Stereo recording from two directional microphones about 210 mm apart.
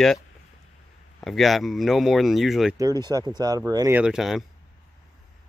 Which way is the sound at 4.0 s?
Centre (ahead or behind).